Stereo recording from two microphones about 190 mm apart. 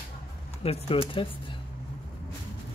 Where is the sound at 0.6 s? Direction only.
30° left (ahead or behind).